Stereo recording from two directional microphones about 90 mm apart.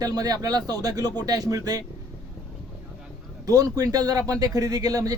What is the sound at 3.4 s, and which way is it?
Speech, 40° right (ahead or behind).